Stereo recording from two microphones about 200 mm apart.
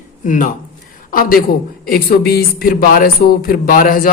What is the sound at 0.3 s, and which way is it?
Speech, 40° left (ahead or behind).